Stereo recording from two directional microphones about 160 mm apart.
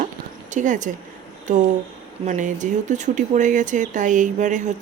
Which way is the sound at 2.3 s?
50° right (ahead or behind).